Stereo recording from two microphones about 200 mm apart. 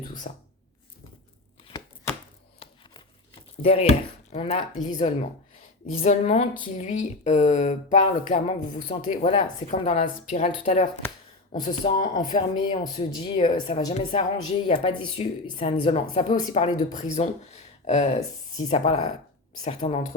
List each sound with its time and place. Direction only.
0.3 s speech: 35° left (ahead or behind)
3.6 s speech: 30° left (ahead or behind)
16.6 s speech: 35° left (ahead or behind)